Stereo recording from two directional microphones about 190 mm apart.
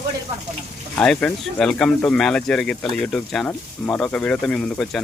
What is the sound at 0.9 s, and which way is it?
Speech, 5° left (ahead or behind).